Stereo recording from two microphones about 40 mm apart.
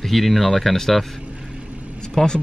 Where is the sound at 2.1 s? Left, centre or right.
Centre.